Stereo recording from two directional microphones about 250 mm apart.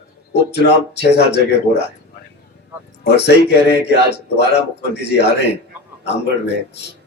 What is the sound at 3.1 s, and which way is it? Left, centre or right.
Speech, left.